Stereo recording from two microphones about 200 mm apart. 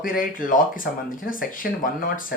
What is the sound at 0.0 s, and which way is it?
Speech, 45° left (ahead or behind).